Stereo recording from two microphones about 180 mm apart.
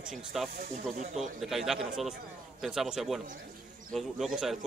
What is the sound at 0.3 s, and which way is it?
Speech, centre (ahead or behind).